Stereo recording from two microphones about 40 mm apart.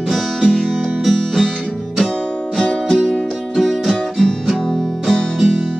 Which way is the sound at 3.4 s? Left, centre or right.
Centre.